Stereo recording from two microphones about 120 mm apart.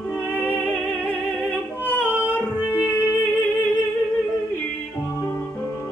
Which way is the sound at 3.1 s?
20° left (ahead or behind).